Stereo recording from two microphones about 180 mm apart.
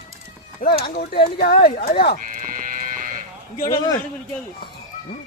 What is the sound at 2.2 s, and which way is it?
Livestock, 50° right (ahead or behind).